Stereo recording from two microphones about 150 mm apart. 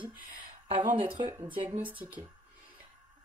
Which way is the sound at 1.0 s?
35° right (ahead or behind).